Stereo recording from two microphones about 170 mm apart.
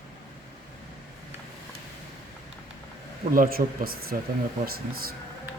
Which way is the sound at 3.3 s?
60° right (ahead or behind).